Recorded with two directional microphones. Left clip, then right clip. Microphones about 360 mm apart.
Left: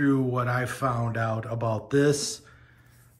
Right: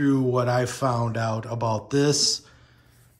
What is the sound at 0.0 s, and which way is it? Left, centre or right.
Speech, centre.